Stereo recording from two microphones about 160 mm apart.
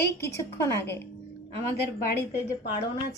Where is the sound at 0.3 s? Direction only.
15° left (ahead or behind).